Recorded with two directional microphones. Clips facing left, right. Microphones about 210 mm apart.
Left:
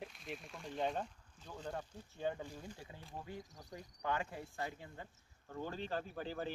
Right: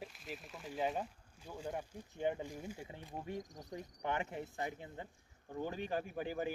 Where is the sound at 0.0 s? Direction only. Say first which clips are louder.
Even; centre (ahead or behind).